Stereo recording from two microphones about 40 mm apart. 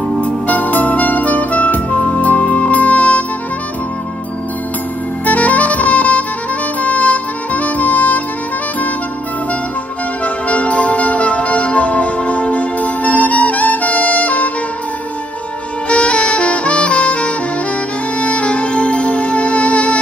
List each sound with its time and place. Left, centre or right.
0.2 s music: left
5.2 s saxophone: left
6.8 s music: left
10.2 s music: left
15.9 s saxophone: left
18.2 s music: left